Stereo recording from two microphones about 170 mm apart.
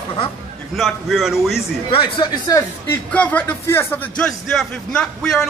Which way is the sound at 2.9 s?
10° left (ahead or behind).